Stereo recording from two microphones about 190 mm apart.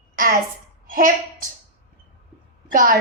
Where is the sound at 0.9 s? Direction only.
45° right (ahead or behind).